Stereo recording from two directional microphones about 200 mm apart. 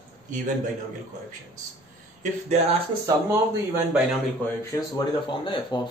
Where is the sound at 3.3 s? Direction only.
10° right (ahead or behind).